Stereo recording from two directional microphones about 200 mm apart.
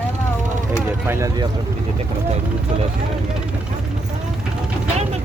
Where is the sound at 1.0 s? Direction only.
15° right (ahead or behind).